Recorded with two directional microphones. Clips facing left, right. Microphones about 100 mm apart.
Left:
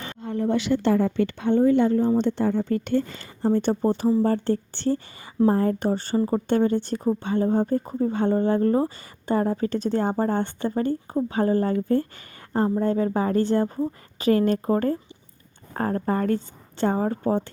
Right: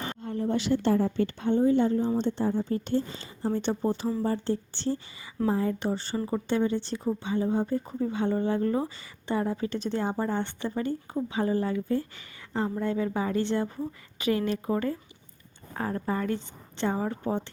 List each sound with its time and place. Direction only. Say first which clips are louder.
0.2 s a woman's voice: left 6 dB; 80° left; by 6.4 s 40° left (ahead or behind)
6.5 s speech: left 4 dB; 50° left (ahead or behind)